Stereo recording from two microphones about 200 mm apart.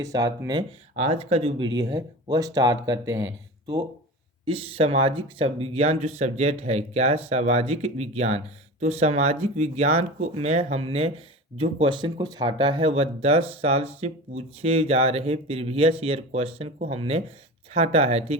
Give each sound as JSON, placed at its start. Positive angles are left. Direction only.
{"t": 0.0, "sound": "speech", "side_deg": -15}
{"t": 0.9, "sound": "speech", "side_deg": -30}
{"t": 4.4, "sound": "speech", "side_deg": -30}